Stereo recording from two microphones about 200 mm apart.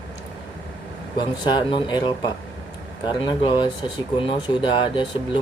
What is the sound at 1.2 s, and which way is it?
Speech, 25° left (ahead or behind).